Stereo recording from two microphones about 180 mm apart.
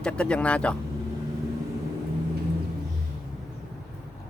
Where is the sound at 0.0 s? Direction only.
5° left (ahead or behind).